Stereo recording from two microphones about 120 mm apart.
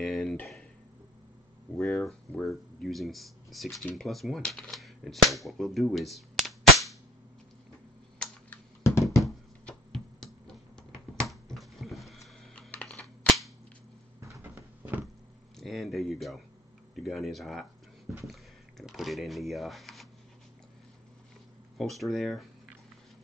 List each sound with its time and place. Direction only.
0.0 s speech: centre (ahead or behind)
1.8 s speech: 5° left (ahead or behind)
8.8 s a sound: 25° left (ahead or behind)
9.2 s a sound: 5° left (ahead or behind)
12.7 s computer keyboard: 10° left (ahead or behind)
14.2 s cupboard open or close: 20° right (ahead or behind)
15.6 s a sound: centre (ahead or behind)
16.9 s speech: centre (ahead or behind)
21.7 s speech: centre (ahead or behind)